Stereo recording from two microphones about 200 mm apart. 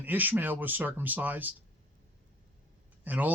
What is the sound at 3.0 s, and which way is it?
Speech, 10° right (ahead or behind).